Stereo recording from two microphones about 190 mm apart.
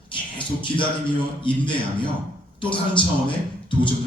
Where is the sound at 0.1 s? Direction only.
25° left (ahead or behind).